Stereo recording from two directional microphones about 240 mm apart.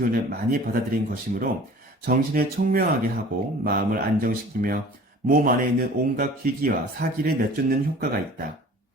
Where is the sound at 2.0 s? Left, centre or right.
Right.